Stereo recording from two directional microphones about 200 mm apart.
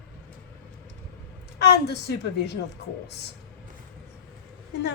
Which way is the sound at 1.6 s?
55° left (ahead or behind).